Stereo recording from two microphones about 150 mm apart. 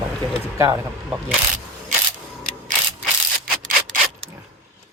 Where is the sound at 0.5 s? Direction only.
20° right (ahead or behind).